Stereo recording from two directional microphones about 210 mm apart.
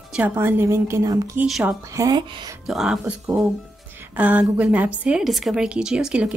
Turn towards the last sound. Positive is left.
turn(degrees=-5)  # may be behind; listen again after turning